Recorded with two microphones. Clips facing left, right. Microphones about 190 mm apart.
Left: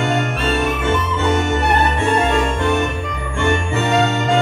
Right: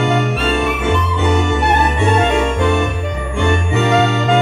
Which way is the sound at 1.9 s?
15° right (ahead or behind).